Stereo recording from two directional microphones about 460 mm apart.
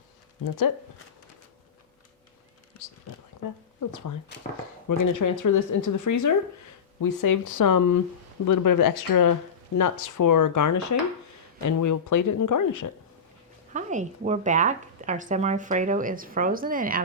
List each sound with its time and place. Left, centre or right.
0.4 s speech: left
3.8 s speech: left
13.7 s speech: centre